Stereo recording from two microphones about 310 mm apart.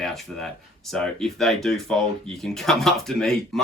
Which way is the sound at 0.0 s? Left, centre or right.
Centre.